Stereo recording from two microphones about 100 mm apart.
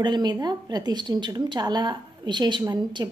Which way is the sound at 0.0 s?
45° right (ahead or behind).